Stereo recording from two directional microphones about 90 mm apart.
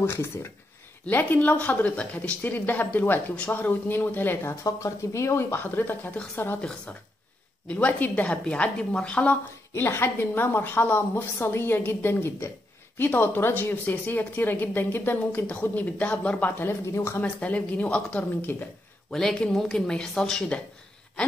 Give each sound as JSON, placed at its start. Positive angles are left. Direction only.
{"t": 0.0, "sound": "a woman's voice", "side_deg": 25}
{"t": 4.6, "sound": "a woman's voice", "side_deg": 35}
{"t": 7.6, "sound": "a woman's voice", "side_deg": 20}
{"t": 17.2, "sound": "speech", "side_deg": 15}
{"t": 19.0, "sound": "speech", "side_deg": 5}